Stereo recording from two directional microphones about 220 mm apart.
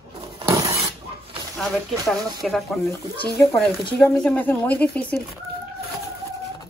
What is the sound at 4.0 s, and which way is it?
Speech, 5° left (ahead or behind).